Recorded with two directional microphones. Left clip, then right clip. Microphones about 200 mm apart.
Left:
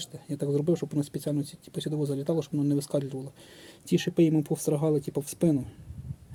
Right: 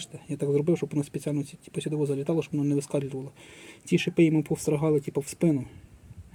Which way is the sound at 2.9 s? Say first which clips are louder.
Even; 5° left (ahead or behind).